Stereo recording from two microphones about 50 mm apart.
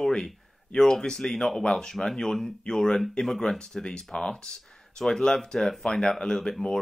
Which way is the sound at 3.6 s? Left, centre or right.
Centre.